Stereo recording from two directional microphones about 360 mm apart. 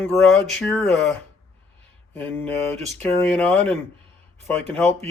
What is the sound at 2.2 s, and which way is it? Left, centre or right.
Speech, centre.